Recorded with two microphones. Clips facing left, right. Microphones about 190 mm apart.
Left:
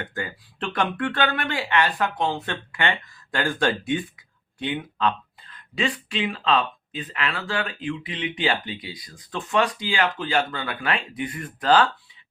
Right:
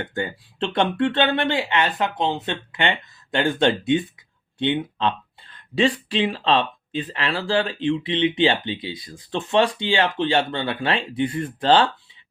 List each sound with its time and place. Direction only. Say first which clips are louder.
0.0 s speech: right 5 dB; 25° right (ahead or behind)